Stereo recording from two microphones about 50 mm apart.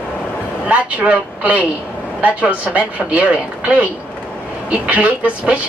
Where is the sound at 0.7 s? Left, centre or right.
Right.